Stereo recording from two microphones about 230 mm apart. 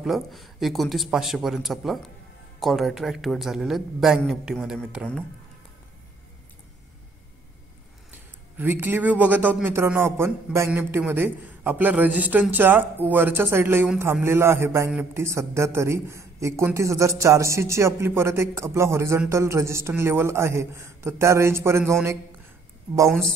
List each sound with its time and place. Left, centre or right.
0.0 s a woman's voice: centre
8.5 s a man's voice: centre